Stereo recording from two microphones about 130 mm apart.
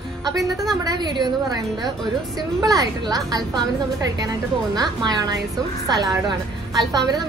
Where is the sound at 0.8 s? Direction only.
35° right (ahead or behind).